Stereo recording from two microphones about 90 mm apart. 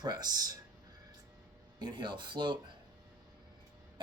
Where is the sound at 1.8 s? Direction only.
55° right (ahead or behind).